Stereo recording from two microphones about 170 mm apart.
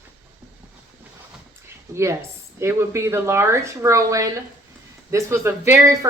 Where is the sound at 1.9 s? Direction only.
15° right (ahead or behind).